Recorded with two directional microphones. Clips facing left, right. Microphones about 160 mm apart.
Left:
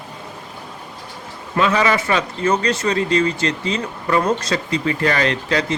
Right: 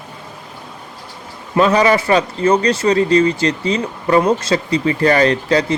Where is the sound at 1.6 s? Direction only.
35° right (ahead or behind).